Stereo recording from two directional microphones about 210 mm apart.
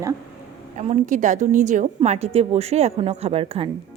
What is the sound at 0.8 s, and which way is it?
A woman's voice, 35° right (ahead or behind).